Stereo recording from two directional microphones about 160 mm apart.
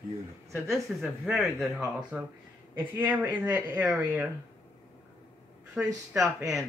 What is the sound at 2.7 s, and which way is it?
Speech, 15° right (ahead or behind).